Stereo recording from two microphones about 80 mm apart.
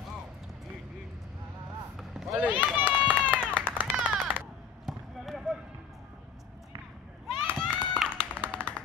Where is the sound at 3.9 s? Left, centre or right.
Centre.